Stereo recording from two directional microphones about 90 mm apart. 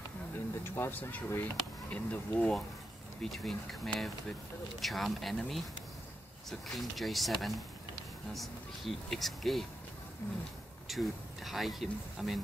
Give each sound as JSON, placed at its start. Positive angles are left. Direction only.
{"t": 0.7, "sound": "speech", "side_deg": 25}
{"t": 3.2, "sound": "speech", "side_deg": 5}
{"t": 6.7, "sound": "speech", "side_deg": 0}
{"t": 10.2, "sound": "speech", "side_deg": 30}
{"t": 10.9, "sound": "speech", "side_deg": 0}